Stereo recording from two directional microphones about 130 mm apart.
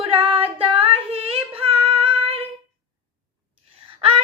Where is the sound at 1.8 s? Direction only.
45° right (ahead or behind).